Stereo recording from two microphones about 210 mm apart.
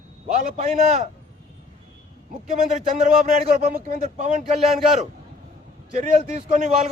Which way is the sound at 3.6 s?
45° right (ahead or behind).